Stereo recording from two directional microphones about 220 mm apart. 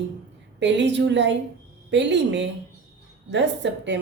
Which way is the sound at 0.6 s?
55° right (ahead or behind).